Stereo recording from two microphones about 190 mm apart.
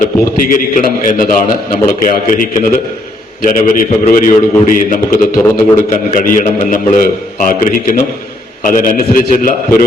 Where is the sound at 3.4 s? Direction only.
45° left (ahead or behind).